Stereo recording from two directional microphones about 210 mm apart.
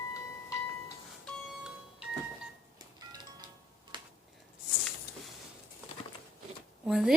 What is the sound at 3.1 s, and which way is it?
Music, 20° right (ahead or behind).